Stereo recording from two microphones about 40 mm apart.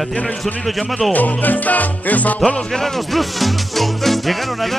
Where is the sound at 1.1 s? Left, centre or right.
Left.